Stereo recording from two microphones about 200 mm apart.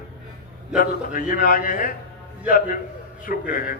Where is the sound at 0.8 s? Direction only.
45° left (ahead or behind).